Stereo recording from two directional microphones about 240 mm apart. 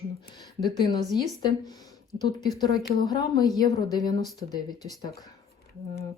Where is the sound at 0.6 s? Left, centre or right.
Centre.